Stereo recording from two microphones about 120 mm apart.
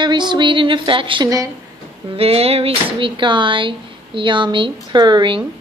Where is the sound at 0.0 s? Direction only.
40° right (ahead or behind).